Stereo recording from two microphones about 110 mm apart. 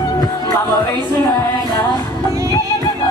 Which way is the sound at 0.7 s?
40° left (ahead or behind).